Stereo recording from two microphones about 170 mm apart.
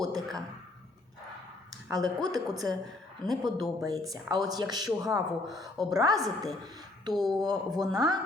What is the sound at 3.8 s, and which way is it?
Speech, 20° right (ahead or behind).